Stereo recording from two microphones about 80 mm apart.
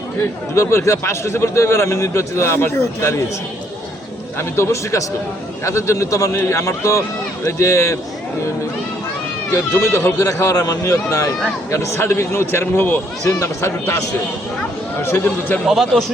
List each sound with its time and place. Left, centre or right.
0.5 s a man's voice: left
4.4 s a man's voice: left
9.7 s a man's voice: left
10.5 s a man's voice: left
13.2 s a man's voice: left
15.0 s a man's voice: left
15.6 s a man's voice: centre